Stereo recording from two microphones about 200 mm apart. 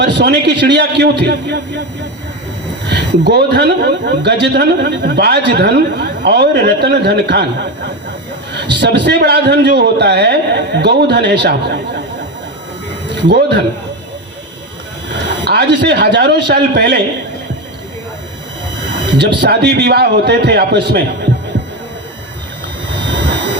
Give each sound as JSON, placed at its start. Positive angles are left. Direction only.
{"t": 0.0, "sound": "speech", "side_deg": -60}
{"t": 2.9, "sound": "speech", "side_deg": -55}
{"t": 13.2, "sound": "speech", "side_deg": -60}
{"t": 15.4, "sound": "speech", "side_deg": -55}
{"t": 19.1, "sound": "speech", "side_deg": -55}